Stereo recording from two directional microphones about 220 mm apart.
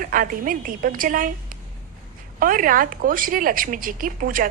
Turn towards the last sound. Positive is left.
turn(degrees=-40)  # may be behind; listen again after turning